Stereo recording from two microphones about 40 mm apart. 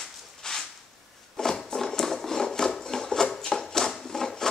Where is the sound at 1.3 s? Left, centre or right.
Centre.